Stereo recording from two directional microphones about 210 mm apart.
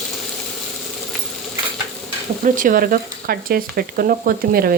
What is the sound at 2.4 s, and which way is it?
Speech, 40° right (ahead or behind).